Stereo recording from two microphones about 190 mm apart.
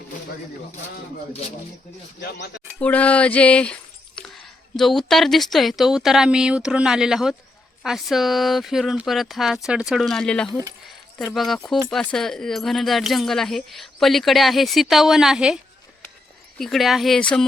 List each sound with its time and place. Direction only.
2.2 s speech: 65° left (ahead or behind)
2.7 s speech: 5° left (ahead or behind)